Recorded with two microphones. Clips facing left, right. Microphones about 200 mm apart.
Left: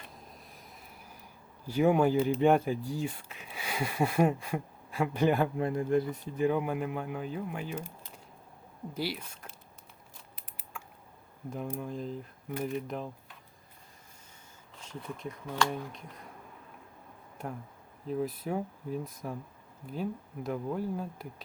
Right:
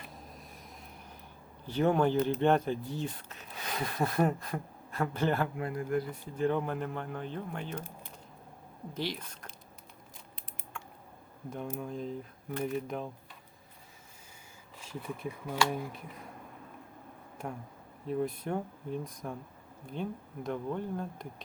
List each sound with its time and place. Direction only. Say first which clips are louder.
0.1 s a sound: right 2 dB; centre (ahead or behind)
1.6 s speech: left 2 dB; 10° left (ahead or behind)
6.4 s speech: left 2 dB; 10° left (ahead or behind)
9.0 s speech: left 1 dB; 10° left (ahead or behind)
11.5 s speech: left 1 dB; centre (ahead or behind)
14.8 s speech: right 1 dB; 5° right (ahead or behind)
18.0 s speech: even; centre (ahead or behind)